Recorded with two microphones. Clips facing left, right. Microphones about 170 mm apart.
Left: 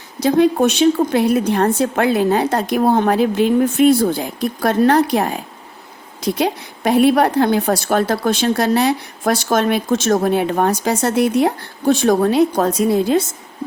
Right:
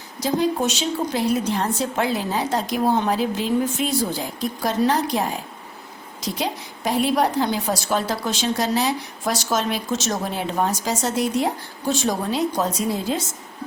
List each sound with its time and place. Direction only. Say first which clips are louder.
0.2 s a woman's voice: left 8 dB; 65° left (ahead or behind)